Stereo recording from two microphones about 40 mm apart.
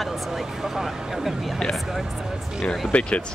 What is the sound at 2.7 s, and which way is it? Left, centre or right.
Speech, left.